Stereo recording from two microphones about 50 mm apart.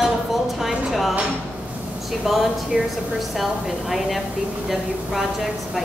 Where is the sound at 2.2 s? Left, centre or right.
Centre.